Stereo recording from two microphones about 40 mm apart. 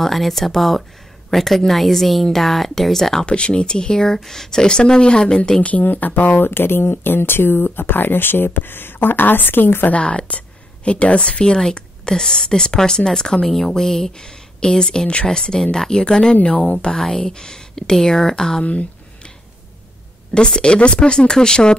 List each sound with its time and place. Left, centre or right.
0.0 s speech: centre
3.3 s speech: left
5.6 s speech: left
9.8 s a woman's voice: left
17.0 s speech: centre
18.6 s speech: left
20.3 s speech: left